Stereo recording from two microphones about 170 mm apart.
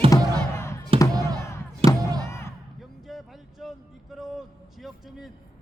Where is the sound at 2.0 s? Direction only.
20° right (ahead or behind).